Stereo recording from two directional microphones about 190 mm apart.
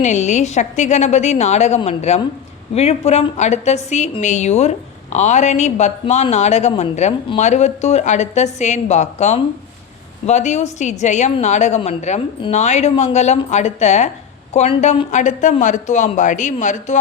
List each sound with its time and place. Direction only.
0.0 s speech: 40° left (ahead or behind)